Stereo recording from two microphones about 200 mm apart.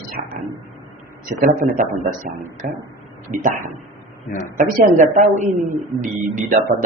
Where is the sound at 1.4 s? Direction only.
45° right (ahead or behind).